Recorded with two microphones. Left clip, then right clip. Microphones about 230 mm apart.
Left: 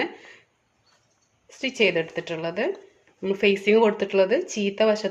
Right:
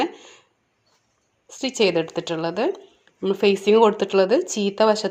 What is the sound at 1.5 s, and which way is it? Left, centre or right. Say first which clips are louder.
A woman's voice: right 2 dB; right.